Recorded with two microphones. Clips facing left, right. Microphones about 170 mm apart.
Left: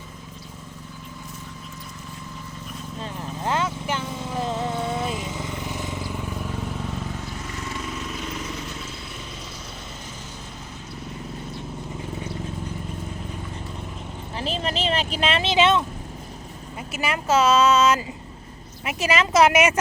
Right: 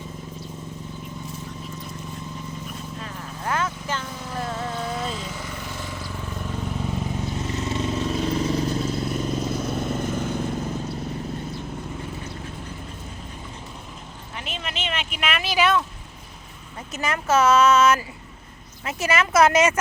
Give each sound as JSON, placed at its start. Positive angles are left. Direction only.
{"t": 3.0, "sound": "vehicle", "side_deg": 20}
{"t": 7.3, "sound": "vehicle", "side_deg": -25}
{"t": 14.3, "sound": "vehicle", "side_deg": 35}
{"t": 16.9, "sound": "speech", "side_deg": 10}